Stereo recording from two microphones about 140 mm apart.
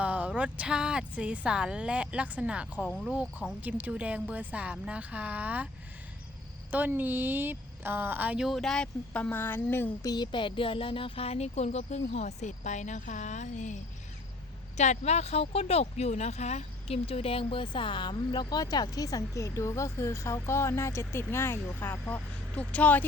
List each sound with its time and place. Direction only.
0.0 s speech: 10° right (ahead or behind)
6.7 s a woman's voice: 10° right (ahead or behind); by 13.7 s 60° left (ahead or behind)
14.8 s speech: 55° left (ahead or behind); by 23.0 s 10° left (ahead or behind)